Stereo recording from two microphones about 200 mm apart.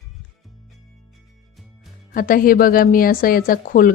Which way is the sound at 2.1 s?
45° left (ahead or behind).